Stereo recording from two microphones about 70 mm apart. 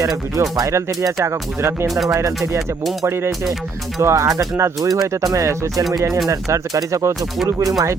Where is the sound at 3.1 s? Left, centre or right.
Right.